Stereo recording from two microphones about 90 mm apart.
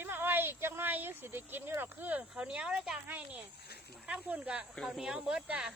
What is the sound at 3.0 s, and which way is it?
Speech, 20° right (ahead or behind).